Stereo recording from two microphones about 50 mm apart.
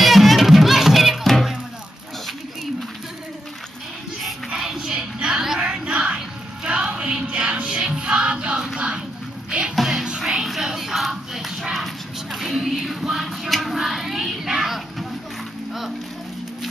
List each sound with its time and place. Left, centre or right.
0.0 s music: centre
4.6 s a sound: centre
5.6 s music: centre
9.8 s music: centre